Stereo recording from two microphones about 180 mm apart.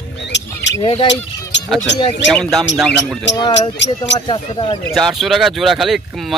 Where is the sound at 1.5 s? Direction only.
80° left.